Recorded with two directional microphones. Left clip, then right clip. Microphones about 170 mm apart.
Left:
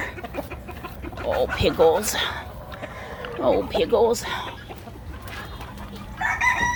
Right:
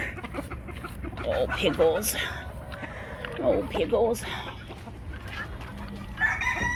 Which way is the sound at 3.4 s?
10° left (ahead or behind).